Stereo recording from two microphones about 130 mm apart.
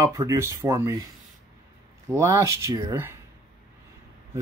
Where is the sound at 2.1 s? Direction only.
20° right (ahead or behind).